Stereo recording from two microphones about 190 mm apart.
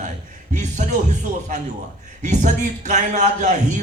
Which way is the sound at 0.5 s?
40° right (ahead or behind).